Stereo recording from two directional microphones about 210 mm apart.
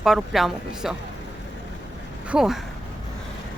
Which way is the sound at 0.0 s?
Centre (ahead or behind).